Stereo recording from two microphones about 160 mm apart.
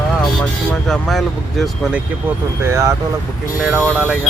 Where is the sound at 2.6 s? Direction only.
20° right (ahead or behind).